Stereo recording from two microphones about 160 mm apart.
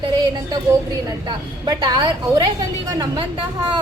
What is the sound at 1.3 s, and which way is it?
A woman's voice, 25° right (ahead or behind).